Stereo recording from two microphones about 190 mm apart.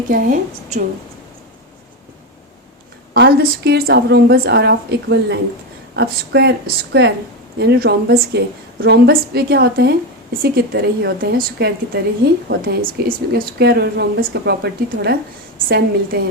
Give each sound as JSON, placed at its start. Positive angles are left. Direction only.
{"t": 0.1, "sound": "a woman's voice", "side_deg": -45}
{"t": 3.2, "sound": "a woman's voice", "side_deg": -55}